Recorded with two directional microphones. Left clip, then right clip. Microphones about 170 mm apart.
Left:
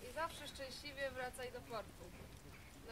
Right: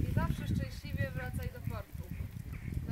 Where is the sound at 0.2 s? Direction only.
15° left (ahead or behind).